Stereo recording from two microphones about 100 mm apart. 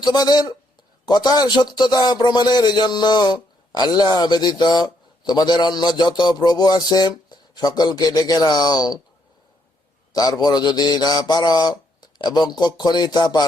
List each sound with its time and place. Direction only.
0.0 s a man's voice: 45° left (ahead or behind)
10.1 s a man's voice: 40° left (ahead or behind)